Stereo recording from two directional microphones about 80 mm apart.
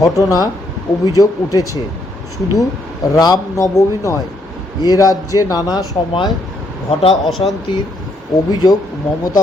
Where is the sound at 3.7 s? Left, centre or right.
Left.